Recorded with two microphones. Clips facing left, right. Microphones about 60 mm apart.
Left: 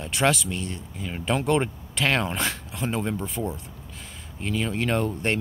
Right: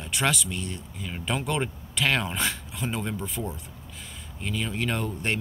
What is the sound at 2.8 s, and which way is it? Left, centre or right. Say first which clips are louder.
Speech: left 3 dB; centre.